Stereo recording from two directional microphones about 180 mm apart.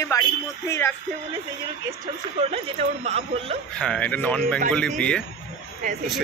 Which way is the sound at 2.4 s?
35° right (ahead or behind).